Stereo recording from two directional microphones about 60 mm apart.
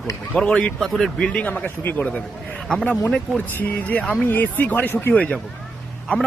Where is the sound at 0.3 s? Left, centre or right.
Centre.